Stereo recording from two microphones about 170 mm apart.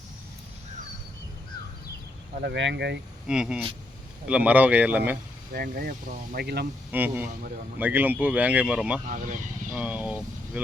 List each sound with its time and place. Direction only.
2.4 s speech: 90° right
3.2 s speech: 5° right (ahead or behind)
5.5 s speech: 65° right (ahead or behind)
6.9 s speech: 10° right (ahead or behind)
9.0 s speech: 50° right (ahead or behind)
9.7 s speech: 10° right (ahead or behind)